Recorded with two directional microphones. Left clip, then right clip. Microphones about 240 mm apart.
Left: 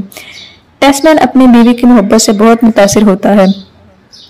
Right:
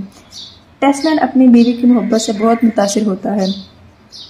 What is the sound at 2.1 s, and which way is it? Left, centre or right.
Speech, left.